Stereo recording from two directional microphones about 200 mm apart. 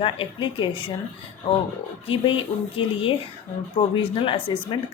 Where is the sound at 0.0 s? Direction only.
25° left (ahead or behind).